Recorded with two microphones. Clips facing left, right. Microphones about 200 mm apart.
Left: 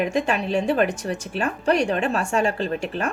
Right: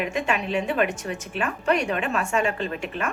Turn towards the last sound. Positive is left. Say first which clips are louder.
# left 3 dB
turn(degrees=35)  # may be behind; listen again after turning